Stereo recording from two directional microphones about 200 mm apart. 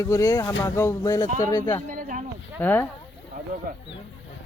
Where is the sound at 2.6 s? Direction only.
10° left (ahead or behind).